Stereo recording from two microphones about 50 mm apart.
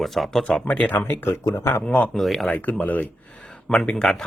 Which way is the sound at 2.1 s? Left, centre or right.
Centre.